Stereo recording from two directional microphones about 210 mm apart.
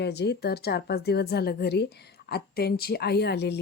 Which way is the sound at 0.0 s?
50° left (ahead or behind).